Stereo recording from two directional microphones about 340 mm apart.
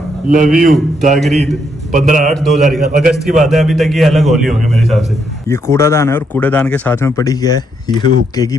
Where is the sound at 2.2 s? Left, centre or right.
Centre.